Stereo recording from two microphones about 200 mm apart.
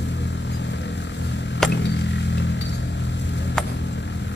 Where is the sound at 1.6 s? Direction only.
60° left (ahead or behind).